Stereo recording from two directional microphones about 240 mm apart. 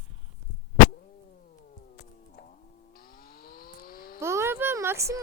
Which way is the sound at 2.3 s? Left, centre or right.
Left.